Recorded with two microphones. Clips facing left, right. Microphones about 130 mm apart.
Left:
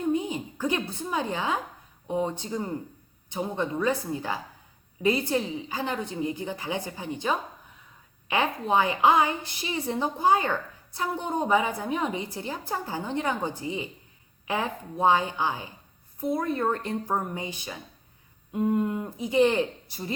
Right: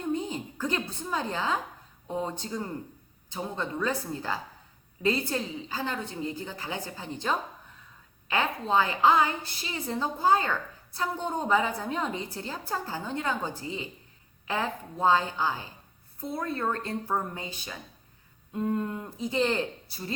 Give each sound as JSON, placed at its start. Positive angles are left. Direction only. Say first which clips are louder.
{"t": 0.1, "sound": "a woman's voice", "louder": "left 1 dB", "side_deg": 10}